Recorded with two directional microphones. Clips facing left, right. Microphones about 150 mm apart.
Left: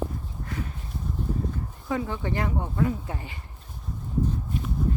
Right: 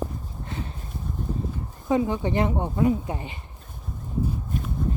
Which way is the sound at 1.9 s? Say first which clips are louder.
Right 6 dB; 20° right (ahead or behind).